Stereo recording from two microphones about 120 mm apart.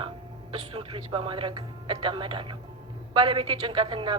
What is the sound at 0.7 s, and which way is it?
A woman's voice, 50° right (ahead or behind).